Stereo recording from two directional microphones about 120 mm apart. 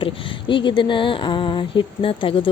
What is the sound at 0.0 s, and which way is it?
Speech, 45° left (ahead or behind).